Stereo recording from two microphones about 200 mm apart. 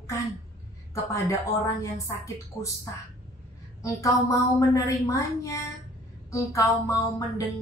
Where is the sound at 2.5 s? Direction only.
15° left (ahead or behind).